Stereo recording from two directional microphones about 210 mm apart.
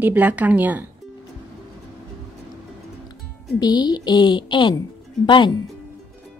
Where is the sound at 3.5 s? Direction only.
20° left (ahead or behind).